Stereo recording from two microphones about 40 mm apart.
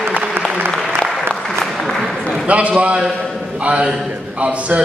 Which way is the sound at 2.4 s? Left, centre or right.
Right.